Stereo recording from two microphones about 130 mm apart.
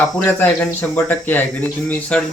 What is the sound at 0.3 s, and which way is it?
Speech, 15° left (ahead or behind).